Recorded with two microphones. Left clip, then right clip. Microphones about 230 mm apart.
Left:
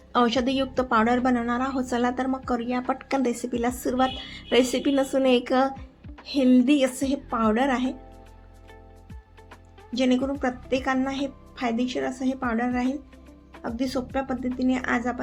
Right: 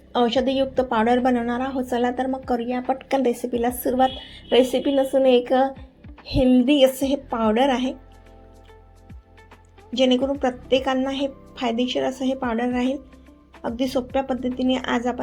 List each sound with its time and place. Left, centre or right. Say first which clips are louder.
0.1 s a woman's voice: right 2 dB; centre
9.9 s a woman's voice: right 5 dB; centre